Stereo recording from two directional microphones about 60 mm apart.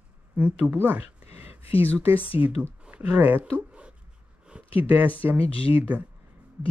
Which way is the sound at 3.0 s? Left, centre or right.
Right.